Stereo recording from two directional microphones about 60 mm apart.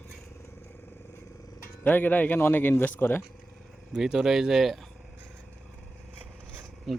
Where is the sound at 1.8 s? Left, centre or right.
Left.